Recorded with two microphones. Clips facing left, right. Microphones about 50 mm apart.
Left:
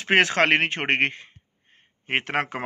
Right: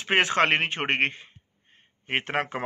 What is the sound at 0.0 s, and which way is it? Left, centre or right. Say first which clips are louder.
Speech: left 2 dB; left.